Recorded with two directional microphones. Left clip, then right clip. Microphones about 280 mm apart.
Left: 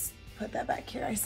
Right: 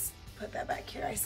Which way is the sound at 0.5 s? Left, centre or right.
Centre.